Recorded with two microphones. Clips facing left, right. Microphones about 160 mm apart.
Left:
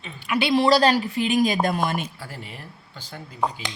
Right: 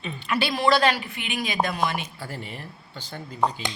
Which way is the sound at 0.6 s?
35° left (ahead or behind).